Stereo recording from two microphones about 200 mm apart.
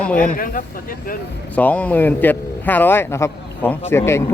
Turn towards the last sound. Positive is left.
turn(degrees=15)  # may be behind; listen again after turning